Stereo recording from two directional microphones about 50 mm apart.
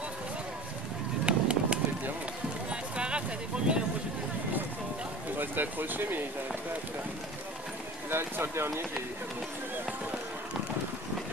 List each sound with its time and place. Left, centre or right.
1.2 s a sound: right
5.4 s speech: right
8.1 s speech: right